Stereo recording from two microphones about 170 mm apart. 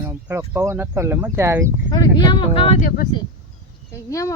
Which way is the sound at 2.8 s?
55° left (ahead or behind).